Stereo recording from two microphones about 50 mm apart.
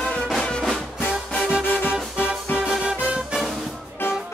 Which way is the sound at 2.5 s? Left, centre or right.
Left.